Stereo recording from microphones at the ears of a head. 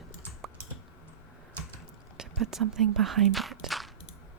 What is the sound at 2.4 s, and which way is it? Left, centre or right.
Speech, right.